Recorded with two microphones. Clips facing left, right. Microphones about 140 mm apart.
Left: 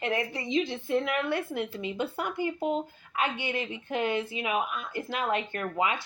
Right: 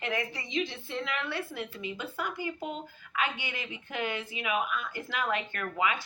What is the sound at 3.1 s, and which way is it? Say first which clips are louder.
Speech: left 3 dB; 35° left (ahead or behind).